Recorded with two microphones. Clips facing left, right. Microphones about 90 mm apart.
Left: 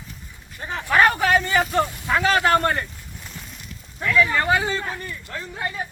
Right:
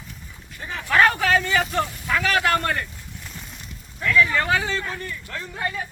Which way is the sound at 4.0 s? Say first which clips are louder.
Even; 10° left (ahead or behind).